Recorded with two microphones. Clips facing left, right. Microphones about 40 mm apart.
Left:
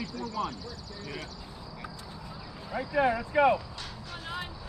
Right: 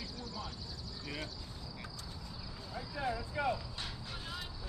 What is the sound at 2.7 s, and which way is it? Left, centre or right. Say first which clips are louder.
Speech: left 12 dB; left.